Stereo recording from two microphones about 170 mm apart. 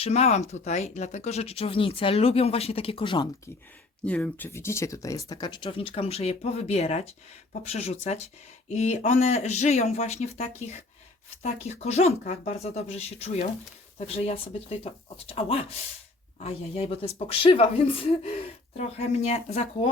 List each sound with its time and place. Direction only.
0.0 s speech: 40° left (ahead or behind)
4.0 s speech: 10° left (ahead or behind); by 19.9 s 35° left (ahead or behind)